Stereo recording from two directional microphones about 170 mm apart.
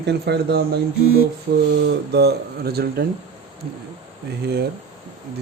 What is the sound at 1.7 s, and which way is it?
Speech, 85° right.